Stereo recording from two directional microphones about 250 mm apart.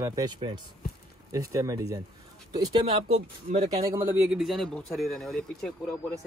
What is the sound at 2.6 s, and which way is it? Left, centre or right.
Speech, right.